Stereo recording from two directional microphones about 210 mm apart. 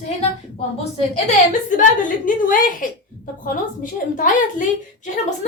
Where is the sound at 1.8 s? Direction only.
40° left (ahead or behind).